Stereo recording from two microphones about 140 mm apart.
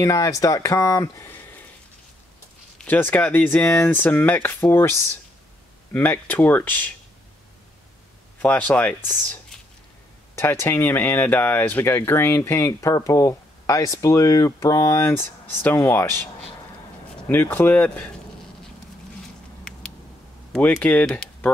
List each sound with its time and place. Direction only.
0.0 s speech: 20° left (ahead or behind)
2.8 s speech: 15° left (ahead or behind)
5.9 s speech: 15° left (ahead or behind)
8.4 s speech: 10° left (ahead or behind)
17.3 s speech: 15° left (ahead or behind)
20.5 s speech: 10° left (ahead or behind)